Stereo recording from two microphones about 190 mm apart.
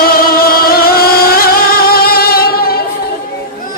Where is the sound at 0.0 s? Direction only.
50° left (ahead or behind).